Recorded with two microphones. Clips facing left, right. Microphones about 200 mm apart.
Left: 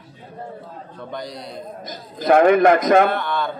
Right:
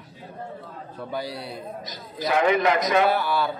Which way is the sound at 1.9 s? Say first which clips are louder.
Left 10 dB; 50° left (ahead or behind).